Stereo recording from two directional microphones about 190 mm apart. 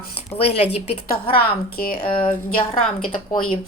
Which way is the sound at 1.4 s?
50° left (ahead or behind).